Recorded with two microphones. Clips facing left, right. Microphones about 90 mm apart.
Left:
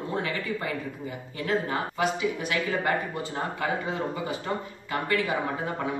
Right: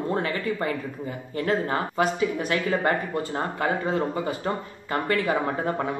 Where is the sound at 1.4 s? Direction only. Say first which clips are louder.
Right 3 dB; 40° right (ahead or behind).